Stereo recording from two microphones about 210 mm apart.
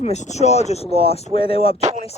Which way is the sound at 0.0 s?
35° left (ahead or behind).